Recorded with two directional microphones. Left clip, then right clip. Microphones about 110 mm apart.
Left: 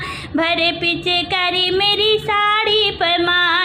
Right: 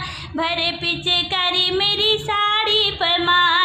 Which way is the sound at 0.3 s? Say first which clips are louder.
Left 4 dB; 35° left (ahead or behind).